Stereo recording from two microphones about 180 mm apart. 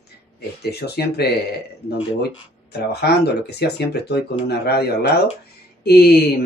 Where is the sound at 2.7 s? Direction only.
65° left (ahead or behind).